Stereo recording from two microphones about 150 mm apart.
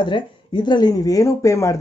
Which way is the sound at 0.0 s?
30° left (ahead or behind).